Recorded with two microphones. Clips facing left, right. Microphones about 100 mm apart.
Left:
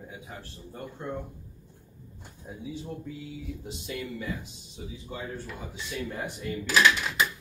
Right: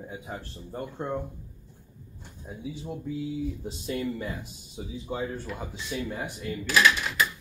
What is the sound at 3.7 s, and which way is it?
Speech, 35° right (ahead or behind).